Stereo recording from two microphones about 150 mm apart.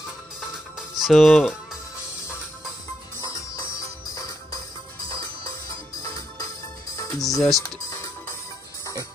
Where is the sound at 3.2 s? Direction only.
20° left (ahead or behind).